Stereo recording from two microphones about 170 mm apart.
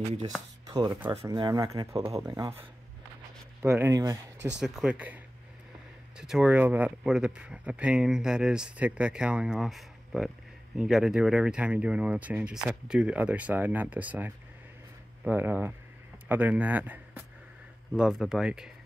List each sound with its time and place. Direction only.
0.7 s speech: 25° right (ahead or behind)
3.6 s speech: 15° right (ahead or behind)
4.5 s a man's voice: 5° right (ahead or behind)